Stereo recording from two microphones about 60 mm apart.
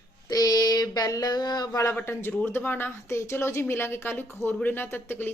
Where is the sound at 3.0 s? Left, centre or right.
Left.